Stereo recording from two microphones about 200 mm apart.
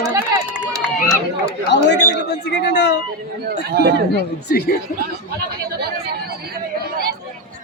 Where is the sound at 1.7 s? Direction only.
60° left (ahead or behind).